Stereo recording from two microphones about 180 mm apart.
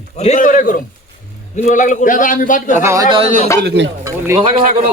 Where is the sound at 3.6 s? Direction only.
75° right (ahead or behind).